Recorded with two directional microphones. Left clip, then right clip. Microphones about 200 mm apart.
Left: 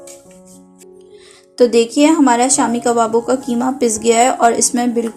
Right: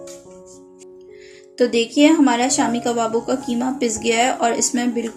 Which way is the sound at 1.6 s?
25° left (ahead or behind).